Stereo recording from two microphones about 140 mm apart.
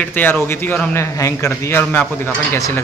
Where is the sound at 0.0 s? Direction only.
15° left (ahead or behind).